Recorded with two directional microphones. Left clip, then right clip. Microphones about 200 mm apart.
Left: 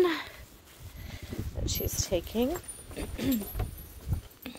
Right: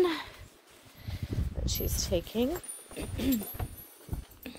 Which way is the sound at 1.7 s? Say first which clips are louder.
Left 1 dB; 5° left (ahead or behind).